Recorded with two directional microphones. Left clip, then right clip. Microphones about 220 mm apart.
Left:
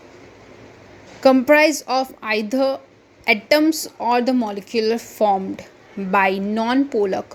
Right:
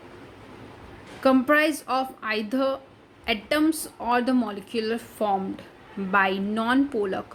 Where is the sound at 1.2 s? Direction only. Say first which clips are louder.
Left 7 dB; 20° left (ahead or behind).